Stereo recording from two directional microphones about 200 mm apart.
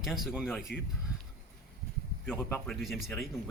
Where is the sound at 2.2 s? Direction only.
5° left (ahead or behind).